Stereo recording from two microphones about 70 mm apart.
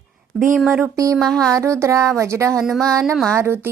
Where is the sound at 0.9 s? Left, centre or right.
Right.